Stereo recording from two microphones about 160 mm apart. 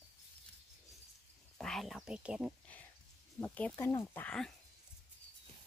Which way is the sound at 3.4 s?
10° left (ahead or behind).